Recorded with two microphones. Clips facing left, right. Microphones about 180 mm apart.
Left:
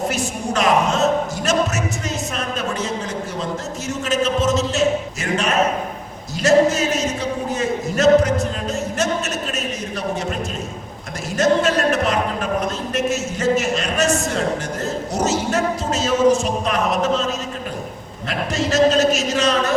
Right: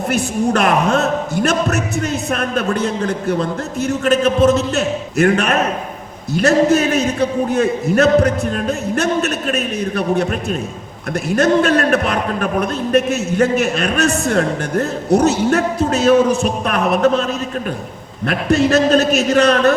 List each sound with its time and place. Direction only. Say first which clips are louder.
0.1 s a man's voice: right 6 dB; 60° right (ahead or behind)
11.3 s a man's voice: right 3 dB; 60° right (ahead or behind)
18.3 s a man's voice: right 7 dB; 60° right (ahead or behind)